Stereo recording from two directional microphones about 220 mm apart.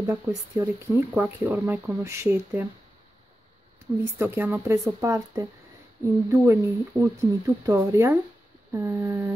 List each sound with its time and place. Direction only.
0.0 s speech: 10° right (ahead or behind)
4.0 s speech: 10° right (ahead or behind)